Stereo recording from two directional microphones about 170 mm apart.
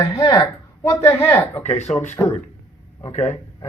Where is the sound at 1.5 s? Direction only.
40° left (ahead or behind).